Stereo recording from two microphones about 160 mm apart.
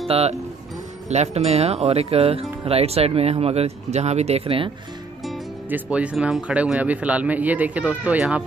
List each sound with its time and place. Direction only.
0.1 s speech: 40° right (ahead or behind)
5.7 s speech: 10° right (ahead or behind)